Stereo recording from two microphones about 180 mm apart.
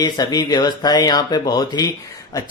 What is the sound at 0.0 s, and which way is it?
Speech, 20° left (ahead or behind).